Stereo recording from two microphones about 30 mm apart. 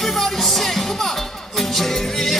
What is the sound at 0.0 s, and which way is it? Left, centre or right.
Music, centre.